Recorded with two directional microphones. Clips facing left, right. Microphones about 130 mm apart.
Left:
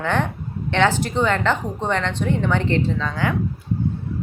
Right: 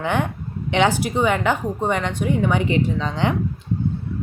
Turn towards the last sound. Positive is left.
turn(degrees=-20)  # may be behind; listen again after turning